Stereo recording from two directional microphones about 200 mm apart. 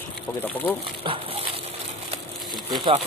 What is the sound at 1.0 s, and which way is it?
Speech, 25° right (ahead or behind).